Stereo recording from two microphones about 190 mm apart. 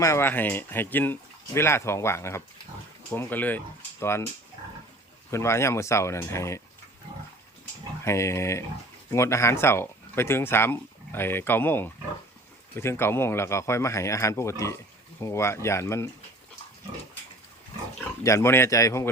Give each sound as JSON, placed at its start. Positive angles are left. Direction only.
{"t": 0.0, "sound": "speech", "side_deg": 15}
{"t": 5.3, "sound": "speech", "side_deg": 15}
{"t": 8.0, "sound": "speech", "side_deg": 15}
{"t": 18.2, "sound": "speech", "side_deg": 15}